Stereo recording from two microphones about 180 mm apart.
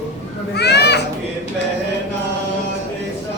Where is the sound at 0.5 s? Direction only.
65° left (ahead or behind).